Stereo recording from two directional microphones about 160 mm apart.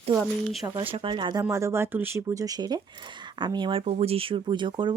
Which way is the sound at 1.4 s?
15° right (ahead or behind).